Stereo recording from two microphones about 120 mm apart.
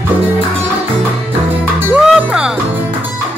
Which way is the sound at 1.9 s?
10° right (ahead or behind).